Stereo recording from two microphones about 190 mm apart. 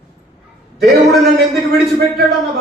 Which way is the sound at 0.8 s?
Centre (ahead or behind).